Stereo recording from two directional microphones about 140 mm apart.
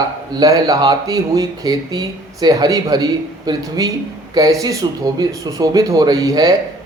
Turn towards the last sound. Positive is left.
turn(degrees=-25)  # may be behind; listen again after turning